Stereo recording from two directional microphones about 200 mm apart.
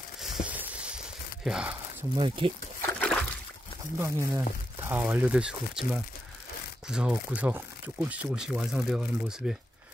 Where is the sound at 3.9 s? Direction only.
15° right (ahead or behind).